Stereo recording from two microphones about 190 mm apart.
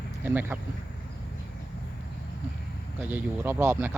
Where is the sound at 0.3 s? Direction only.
10° right (ahead or behind).